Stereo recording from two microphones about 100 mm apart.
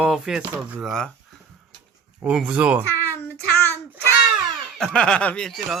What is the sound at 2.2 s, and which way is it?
Speech, 10° right (ahead or behind).